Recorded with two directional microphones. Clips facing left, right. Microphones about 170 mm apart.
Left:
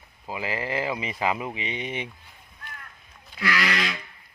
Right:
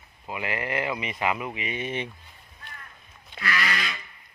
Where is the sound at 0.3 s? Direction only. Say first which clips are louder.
Left 1 dB; 30° left (ahead or behind); by 2.0 s 15° left (ahead or behind).